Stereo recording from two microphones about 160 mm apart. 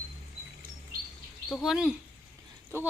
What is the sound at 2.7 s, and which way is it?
Speech, 15° right (ahead or behind).